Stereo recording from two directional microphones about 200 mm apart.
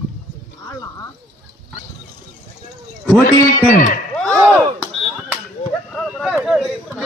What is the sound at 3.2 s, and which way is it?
Speech, 40° left (ahead or behind).